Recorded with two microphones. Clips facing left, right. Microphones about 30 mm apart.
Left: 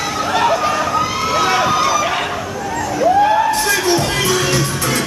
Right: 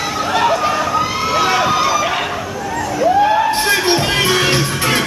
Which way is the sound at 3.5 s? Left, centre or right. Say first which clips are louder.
Right 1 dB; right.